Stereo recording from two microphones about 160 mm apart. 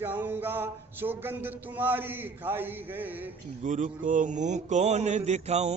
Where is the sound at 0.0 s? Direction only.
10° right (ahead or behind).